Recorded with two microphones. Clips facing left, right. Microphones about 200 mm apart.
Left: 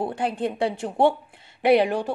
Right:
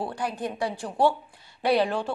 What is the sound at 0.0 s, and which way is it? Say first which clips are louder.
A woman's voice: left 5 dB; 25° left (ahead or behind).